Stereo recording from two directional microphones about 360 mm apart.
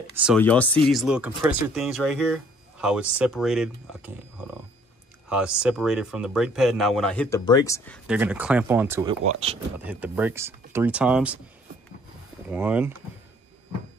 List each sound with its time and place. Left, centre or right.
0.2 s speech: centre
5.3 s speech: centre
9.8 s speech: centre
12.4 s speech: centre